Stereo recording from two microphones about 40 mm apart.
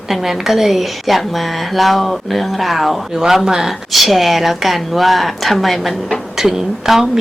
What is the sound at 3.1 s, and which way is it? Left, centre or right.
Speech, centre.